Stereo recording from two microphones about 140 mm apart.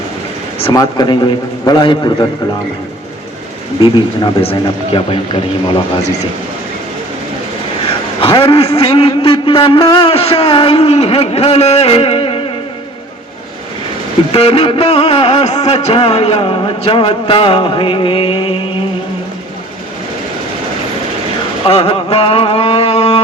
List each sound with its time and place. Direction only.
0.7 s a man's voice: 30° left (ahead or behind)
3.8 s a man's voice: 35° left (ahead or behind)
8.2 s music: 40° left (ahead or behind)
14.3 s music: 45° left (ahead or behind)
21.7 s music: 45° left (ahead or behind)